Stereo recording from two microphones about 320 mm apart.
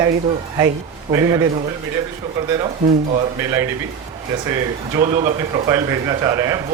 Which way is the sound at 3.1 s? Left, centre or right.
Centre.